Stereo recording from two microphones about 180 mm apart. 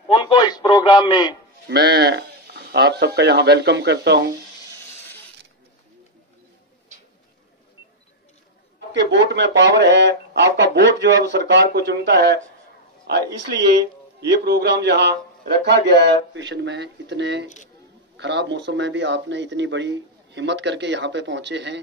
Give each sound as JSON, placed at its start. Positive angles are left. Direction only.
{"t": 0.1, "sound": "a man's voice", "side_deg": 25}
{"t": 1.7, "sound": "speech", "side_deg": -65}
{"t": 8.7, "sound": "speech", "side_deg": -70}